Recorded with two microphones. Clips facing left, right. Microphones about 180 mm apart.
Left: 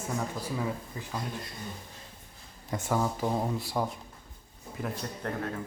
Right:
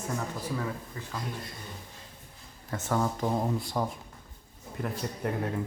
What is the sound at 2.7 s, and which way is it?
Speech, 10° left (ahead or behind).